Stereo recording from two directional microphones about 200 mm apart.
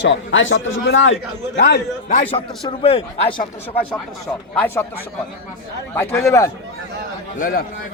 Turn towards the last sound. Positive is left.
turn(degrees=45)  # may be behind; listen again after turning